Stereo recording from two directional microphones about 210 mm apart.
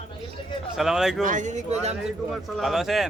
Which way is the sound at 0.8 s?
Centre (ahead or behind).